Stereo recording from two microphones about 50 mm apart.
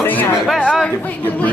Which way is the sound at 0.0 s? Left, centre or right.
Left.